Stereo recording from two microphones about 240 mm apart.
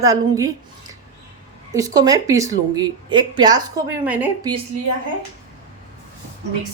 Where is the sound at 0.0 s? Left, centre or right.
Centre.